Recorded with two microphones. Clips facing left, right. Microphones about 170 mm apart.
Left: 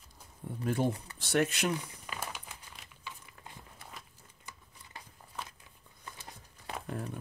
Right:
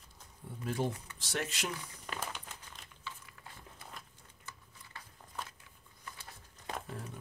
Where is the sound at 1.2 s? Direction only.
60° left (ahead or behind).